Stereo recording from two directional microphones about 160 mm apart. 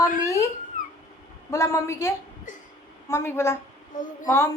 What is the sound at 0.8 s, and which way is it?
Cat, 55° left (ahead or behind).